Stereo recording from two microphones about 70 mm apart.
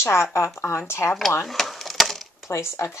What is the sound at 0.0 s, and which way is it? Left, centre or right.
Speech, left.